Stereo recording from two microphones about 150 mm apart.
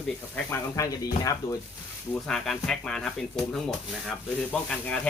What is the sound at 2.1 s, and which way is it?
Speech, 5° left (ahead or behind).